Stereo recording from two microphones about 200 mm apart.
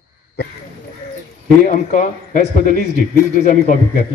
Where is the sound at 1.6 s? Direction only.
40° left (ahead or behind).